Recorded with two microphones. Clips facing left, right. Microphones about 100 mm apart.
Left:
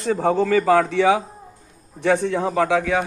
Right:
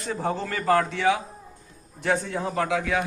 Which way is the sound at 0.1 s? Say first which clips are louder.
Left 10 dB; 90° left.